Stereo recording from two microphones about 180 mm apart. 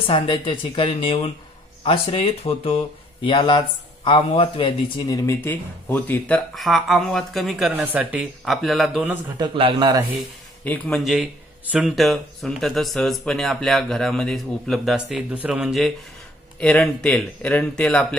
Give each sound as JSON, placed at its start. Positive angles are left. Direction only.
{"t": 0.0, "sound": "speech", "side_deg": 30}
{"t": 9.4, "sound": "speech", "side_deg": -25}
{"t": 10.6, "sound": "speech", "side_deg": 10}